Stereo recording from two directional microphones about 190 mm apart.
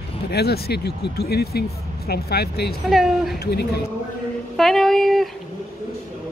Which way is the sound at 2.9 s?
Centre (ahead or behind).